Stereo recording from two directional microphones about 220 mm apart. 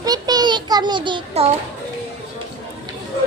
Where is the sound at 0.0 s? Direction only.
15° right (ahead or behind).